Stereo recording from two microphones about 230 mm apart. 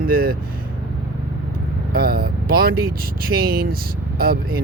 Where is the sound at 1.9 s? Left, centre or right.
Right.